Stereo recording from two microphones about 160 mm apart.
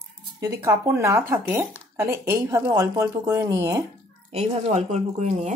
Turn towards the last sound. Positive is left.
turn(degrees=-45)  # may be behind; listen again after turning